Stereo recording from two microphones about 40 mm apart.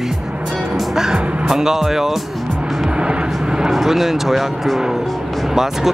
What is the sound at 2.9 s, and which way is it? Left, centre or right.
Vehicle, right.